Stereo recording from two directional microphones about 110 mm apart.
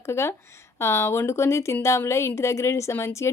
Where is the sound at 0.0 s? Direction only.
25° left (ahead or behind).